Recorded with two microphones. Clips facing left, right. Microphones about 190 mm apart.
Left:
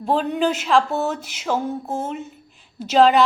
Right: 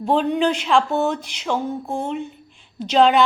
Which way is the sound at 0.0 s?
Centre (ahead or behind).